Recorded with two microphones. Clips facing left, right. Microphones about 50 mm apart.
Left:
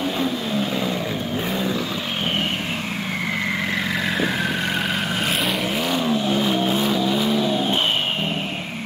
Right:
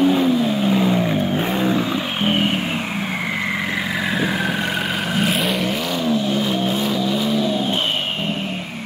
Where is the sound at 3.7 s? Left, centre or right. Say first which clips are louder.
Right 1 dB; centre.